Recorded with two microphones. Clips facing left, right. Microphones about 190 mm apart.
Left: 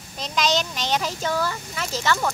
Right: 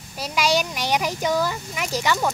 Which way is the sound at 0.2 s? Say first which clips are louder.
Right 2 dB; 10° right (ahead or behind).